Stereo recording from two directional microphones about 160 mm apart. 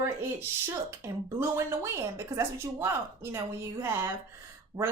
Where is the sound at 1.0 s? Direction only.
15° right (ahead or behind).